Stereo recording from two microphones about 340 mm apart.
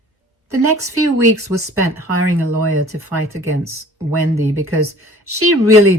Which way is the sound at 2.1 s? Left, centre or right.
Right.